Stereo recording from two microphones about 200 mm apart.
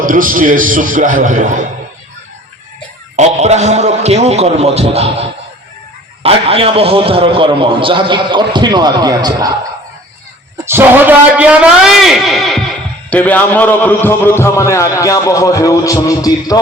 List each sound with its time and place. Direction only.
0.0 s a man's voice: 40° right (ahead or behind)
3.2 s a man's voice: 35° right (ahead or behind)
10.7 s a man's voice: 10° right (ahead or behind); by 16.6 s 20° left (ahead or behind)